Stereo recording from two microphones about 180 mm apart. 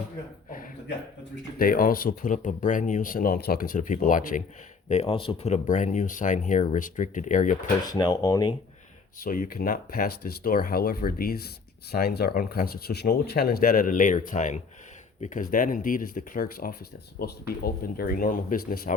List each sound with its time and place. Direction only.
1.5 s speech: 55° left (ahead or behind)
4.9 s speech: 35° left (ahead or behind)
7.9 s speech: 20° left (ahead or behind)
9.2 s speech: 50° left (ahead or behind)